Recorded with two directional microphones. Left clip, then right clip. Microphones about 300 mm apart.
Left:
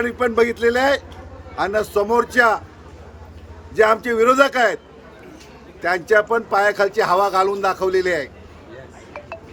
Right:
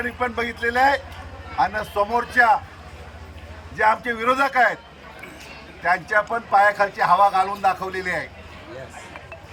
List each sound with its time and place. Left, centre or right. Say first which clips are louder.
0.0 s speech: left 7 dB; centre
3.8 s speech: left 5 dB; left
5.8 s speech: left 3 dB; centre